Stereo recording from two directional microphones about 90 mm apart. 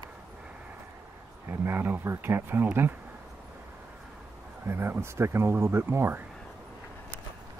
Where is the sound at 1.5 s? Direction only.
25° right (ahead or behind).